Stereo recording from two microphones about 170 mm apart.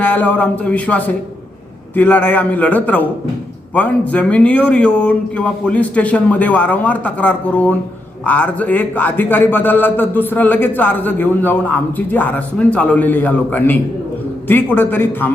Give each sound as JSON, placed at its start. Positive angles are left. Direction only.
{"t": 0.0, "sound": "a man's voice", "side_deg": 10}